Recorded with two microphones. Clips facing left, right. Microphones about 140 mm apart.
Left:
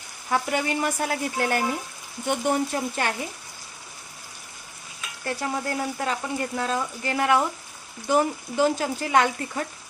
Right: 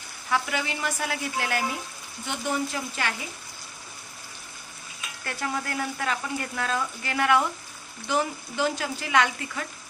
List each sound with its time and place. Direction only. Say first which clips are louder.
0.3 s speech: left 3 dB; 45° left (ahead or behind)
2.2 s speech: left 5 dB; 55° left (ahead or behind)
5.2 s speech: left 3 dB; 25° left (ahead or behind)
8.0 s speech: left 5 dB; 40° left (ahead or behind)